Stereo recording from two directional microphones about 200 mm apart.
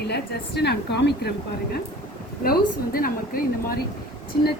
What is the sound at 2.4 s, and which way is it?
A woman's voice, 45° left (ahead or behind).